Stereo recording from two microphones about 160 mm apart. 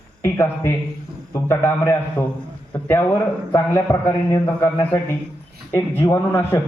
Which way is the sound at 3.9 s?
25° left (ahead or behind).